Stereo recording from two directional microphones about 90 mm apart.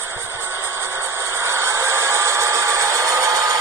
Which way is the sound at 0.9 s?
30° right (ahead or behind).